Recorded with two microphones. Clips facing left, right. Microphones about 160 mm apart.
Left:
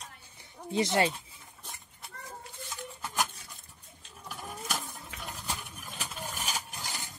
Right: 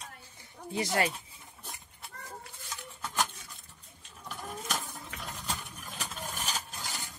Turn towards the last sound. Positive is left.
turn(degrees=15)  # may be behind; listen again after turning